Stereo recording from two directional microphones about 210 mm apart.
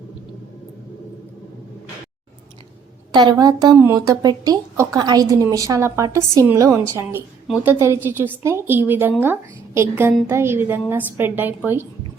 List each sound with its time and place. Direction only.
3.1 s a woman's voice: 20° right (ahead or behind)